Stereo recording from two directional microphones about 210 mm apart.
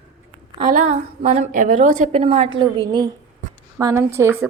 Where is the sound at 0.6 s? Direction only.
35° right (ahead or behind).